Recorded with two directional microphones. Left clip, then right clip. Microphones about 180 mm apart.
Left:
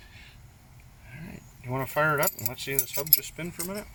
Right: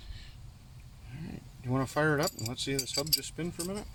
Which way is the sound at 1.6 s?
30° right (ahead or behind).